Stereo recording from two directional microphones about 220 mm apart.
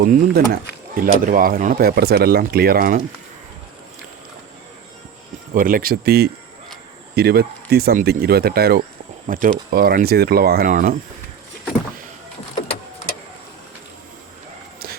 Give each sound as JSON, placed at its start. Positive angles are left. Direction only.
{"t": 0.1, "sound": "speech", "side_deg": -40}
{"t": 5.5, "sound": "speech", "side_deg": -40}